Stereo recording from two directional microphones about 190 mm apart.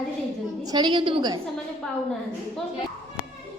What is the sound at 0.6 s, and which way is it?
Speech, 20° right (ahead or behind).